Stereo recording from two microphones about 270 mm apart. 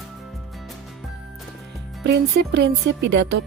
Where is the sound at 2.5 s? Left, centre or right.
Right.